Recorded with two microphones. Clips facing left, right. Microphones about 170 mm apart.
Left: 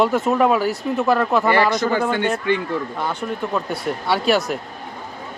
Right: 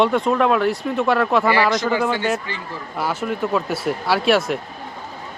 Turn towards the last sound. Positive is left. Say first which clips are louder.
# right 1 dB
turn(degrees=0)  # may be behind; listen again after turning